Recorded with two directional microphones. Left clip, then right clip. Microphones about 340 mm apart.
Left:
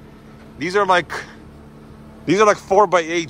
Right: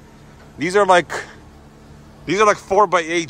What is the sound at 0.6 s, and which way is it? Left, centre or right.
Speech, centre.